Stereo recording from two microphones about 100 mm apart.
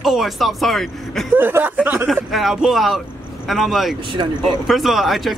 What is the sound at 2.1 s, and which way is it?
Speech, centre (ahead or behind).